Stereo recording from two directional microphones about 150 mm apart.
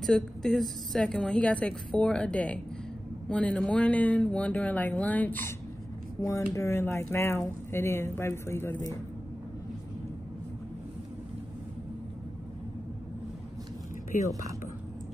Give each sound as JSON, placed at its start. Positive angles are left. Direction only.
{"t": 0.0, "sound": "a woman's voice", "side_deg": 5}
{"t": 6.5, "sound": "speech", "side_deg": 15}